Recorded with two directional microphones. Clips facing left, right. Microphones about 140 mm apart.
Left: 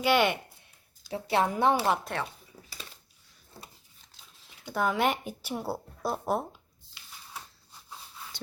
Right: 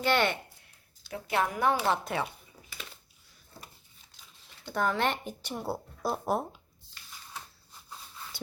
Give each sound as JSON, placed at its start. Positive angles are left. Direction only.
{"t": 0.0, "sound": "speech", "side_deg": 10}
{"t": 1.1, "sound": "speech", "side_deg": 30}
{"t": 2.1, "sound": "speech", "side_deg": -5}
{"t": 4.4, "sound": "speech", "side_deg": 10}